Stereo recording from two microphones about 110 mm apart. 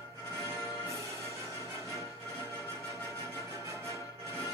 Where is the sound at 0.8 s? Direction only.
25° right (ahead or behind).